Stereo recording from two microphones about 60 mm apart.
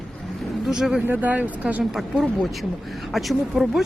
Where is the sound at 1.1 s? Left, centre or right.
Right.